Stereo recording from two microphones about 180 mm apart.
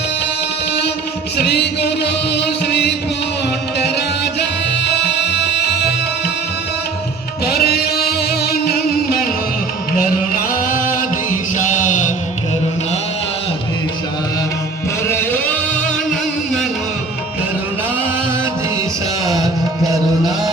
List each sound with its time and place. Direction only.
1.5 s music: 65° left (ahead or behind)
4.8 s music: 70° left (ahead or behind)
7.4 s music: 60° left (ahead or behind); by 12.1 s 45° left (ahead or behind)
15.0 s music: 15° left (ahead or behind)
19.3 s music: 20° right (ahead or behind)